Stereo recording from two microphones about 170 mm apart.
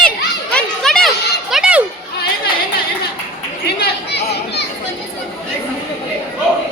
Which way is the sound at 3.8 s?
75° left (ahead or behind).